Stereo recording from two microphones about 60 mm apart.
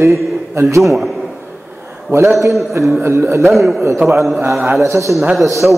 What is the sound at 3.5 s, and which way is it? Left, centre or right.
Speech, centre.